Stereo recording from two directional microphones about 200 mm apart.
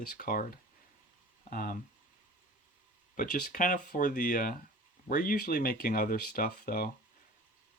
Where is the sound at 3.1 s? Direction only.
45° left (ahead or behind).